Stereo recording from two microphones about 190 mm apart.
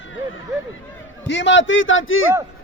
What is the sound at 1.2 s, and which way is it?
A man's voice, 70° left (ahead or behind).